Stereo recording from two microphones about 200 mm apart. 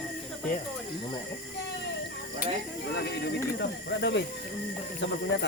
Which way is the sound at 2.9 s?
55° left (ahead or behind).